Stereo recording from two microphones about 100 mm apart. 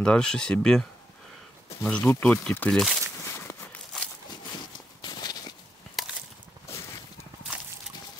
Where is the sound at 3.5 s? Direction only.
20° left (ahead or behind).